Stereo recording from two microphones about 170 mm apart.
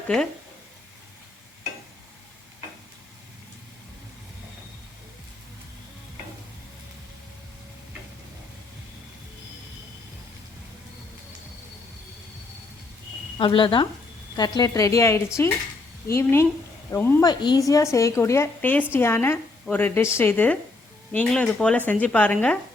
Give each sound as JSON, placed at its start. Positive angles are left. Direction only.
{"t": 13.4, "sound": "a woman's voice", "side_deg": 30}